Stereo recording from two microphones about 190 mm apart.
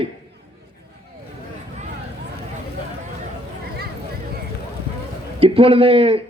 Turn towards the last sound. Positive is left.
turn(degrees=-30)  # may be behind; listen again after turning